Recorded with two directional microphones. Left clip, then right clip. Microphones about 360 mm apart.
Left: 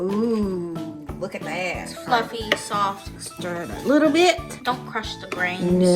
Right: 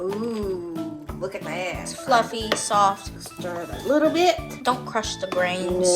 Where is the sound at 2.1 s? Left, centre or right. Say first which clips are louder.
Right 1 dB; centre.